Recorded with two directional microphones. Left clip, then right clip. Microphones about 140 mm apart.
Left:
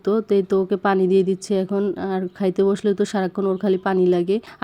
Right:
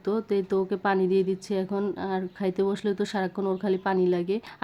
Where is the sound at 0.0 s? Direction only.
30° left (ahead or behind).